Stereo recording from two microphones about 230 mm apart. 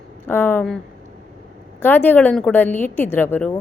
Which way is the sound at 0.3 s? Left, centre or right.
Centre.